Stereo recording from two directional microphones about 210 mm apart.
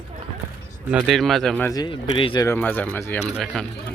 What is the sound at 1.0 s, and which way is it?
Speech, centre (ahead or behind).